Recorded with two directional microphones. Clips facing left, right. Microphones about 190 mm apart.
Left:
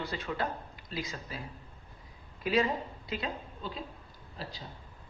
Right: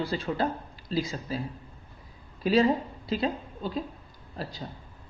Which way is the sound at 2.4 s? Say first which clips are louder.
Right 6 dB; 30° right (ahead or behind).